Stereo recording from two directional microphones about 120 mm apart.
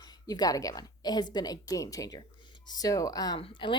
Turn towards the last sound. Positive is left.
turn(degrees=45)  # may be behind; listen again after turning